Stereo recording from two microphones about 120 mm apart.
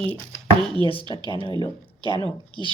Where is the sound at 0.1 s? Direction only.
15° left (ahead or behind).